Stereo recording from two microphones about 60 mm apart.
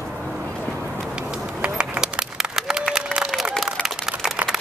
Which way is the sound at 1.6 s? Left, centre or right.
Centre.